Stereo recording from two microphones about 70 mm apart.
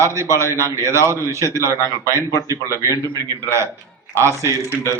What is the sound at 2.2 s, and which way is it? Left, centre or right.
Speech, left.